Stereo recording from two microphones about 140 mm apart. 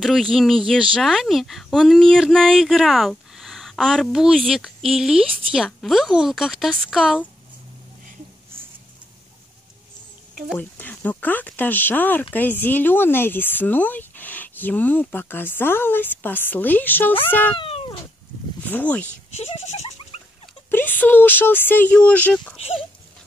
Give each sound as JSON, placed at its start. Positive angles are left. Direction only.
{"t": 0.0, "sound": "speech", "side_deg": 0}
{"t": 10.5, "sound": "speech", "side_deg": 10}
{"t": 17.6, "sound": "cat", "side_deg": 45}
{"t": 18.6, "sound": "speech", "side_deg": 10}
{"t": 19.3, "sound": "a sound", "side_deg": 50}
{"t": 20.7, "sound": "speech", "side_deg": 15}
{"t": 22.6, "sound": "speech", "side_deg": 40}